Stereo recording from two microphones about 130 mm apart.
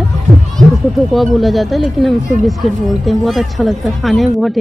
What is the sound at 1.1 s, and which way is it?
Speech, centre (ahead or behind).